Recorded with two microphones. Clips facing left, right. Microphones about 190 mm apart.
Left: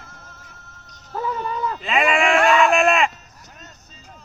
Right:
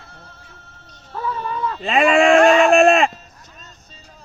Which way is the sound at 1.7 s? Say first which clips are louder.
Right 6 dB; 35° right (ahead or behind).